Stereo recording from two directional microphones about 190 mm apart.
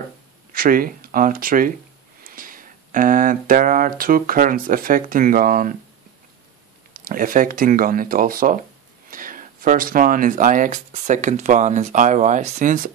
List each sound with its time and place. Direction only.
0.5 s speech: 50° right (ahead or behind)
6.9 s speech: 50° right (ahead or behind)